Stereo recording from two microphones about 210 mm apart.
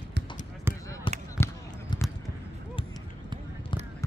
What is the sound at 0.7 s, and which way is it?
Basketball bounce, 10° right (ahead or behind).